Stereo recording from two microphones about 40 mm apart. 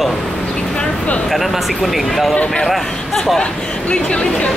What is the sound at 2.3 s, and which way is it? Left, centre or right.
Speech, left.